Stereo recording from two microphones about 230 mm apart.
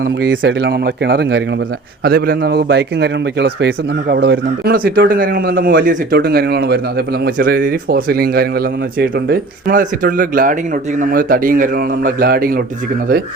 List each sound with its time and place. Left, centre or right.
0.0 s a man's voice: right